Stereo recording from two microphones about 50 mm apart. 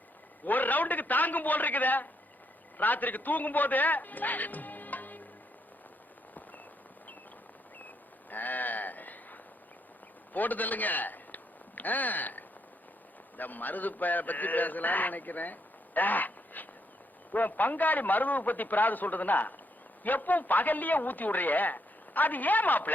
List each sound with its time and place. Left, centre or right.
0.4 s a man's voice: left
8.3 s a man's voice: left
16.0 s duck: left
17.3 s a man's voice: left